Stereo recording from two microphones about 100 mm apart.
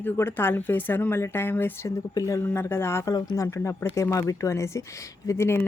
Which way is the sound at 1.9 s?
35° left (ahead or behind).